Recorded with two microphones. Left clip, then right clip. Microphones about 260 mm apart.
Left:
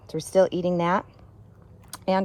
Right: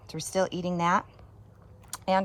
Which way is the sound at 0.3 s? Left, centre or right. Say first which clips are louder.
Left 8 dB; centre.